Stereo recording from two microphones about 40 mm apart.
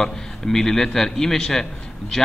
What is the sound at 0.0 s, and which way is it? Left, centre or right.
A man's voice, centre.